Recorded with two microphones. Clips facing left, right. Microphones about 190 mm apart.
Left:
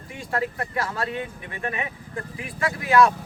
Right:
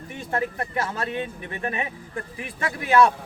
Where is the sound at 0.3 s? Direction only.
25° right (ahead or behind).